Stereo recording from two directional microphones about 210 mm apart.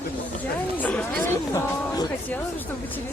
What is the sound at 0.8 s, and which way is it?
Speech, 5° left (ahead or behind).